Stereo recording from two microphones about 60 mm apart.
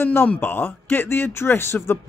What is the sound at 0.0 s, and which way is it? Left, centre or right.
Speech, left.